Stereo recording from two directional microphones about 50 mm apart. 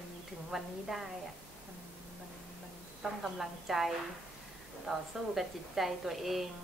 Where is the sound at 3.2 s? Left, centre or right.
Centre.